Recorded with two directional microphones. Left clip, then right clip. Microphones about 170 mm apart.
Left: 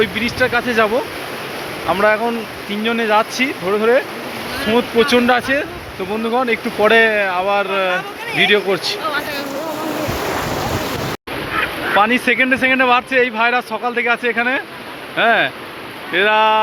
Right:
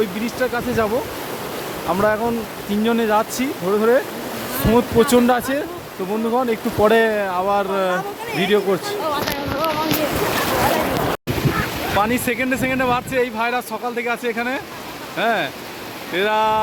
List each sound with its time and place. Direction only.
0.0 s speech: 10° right (ahead or behind)
1.9 s speech: 10° right (ahead or behind)
2.8 s speech: 30° right (ahead or behind); by 4.0 s 15° right (ahead or behind)
4.6 s speech: 30° right (ahead or behind); by 9.0 s 15° right (ahead or behind)
11.9 s speech: centre (ahead or behind)